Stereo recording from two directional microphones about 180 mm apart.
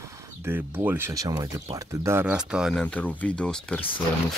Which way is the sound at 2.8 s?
10° left (ahead or behind).